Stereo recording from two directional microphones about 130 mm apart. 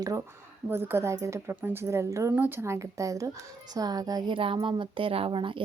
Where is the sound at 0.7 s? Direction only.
15° right (ahead or behind).